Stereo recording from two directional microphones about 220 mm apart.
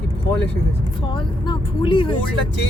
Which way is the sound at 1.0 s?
25° left (ahead or behind).